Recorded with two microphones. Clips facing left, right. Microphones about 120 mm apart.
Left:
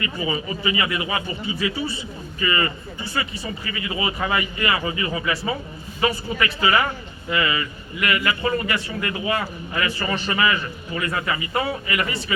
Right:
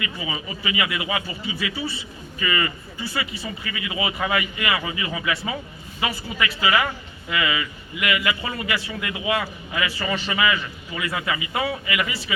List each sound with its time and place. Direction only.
0.0 s a man's voice: 35° left (ahead or behind)